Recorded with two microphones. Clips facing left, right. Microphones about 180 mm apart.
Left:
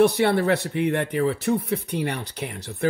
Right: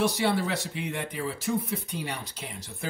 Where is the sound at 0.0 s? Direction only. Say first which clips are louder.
Left 7 dB; 60° left (ahead or behind).